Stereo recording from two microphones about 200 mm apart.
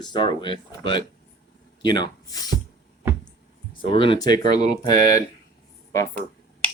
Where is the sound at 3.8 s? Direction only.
25° left (ahead or behind).